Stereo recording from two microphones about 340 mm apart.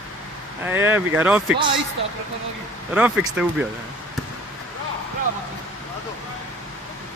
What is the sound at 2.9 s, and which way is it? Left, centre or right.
Speech, centre.